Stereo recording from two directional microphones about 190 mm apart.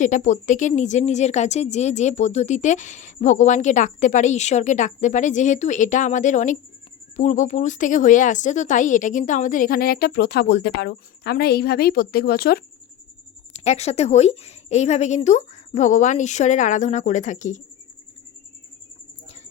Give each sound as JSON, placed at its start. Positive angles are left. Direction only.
{"t": 0.0, "sound": "speech", "side_deg": 40}
{"t": 13.5, "sound": "speech", "side_deg": 35}